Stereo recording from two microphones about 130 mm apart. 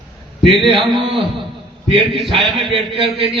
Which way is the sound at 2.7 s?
45° right (ahead or behind).